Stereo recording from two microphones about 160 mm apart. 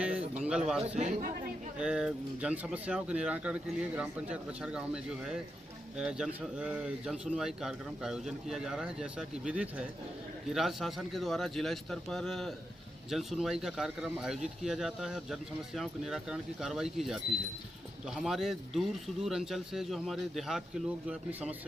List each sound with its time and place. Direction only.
0.0 s a sound: 5° right (ahead or behind)
0.7 s speech: 5° right (ahead or behind)
0.9 s speech: 50° right (ahead or behind)
1.8 s speech: 5° right (ahead or behind)
6.0 s speech: 5° right (ahead or behind)